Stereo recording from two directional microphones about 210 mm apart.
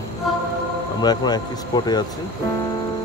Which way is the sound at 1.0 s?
20° left (ahead or behind).